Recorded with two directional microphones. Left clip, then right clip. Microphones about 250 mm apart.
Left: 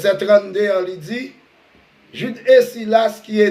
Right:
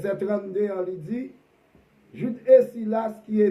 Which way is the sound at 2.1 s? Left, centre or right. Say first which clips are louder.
Left 5 dB; centre.